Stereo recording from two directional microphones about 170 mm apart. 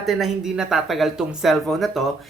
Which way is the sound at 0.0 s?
Centre (ahead or behind).